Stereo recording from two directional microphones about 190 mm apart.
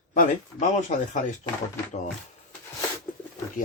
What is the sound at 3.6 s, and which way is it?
Speech, 45° left (ahead or behind).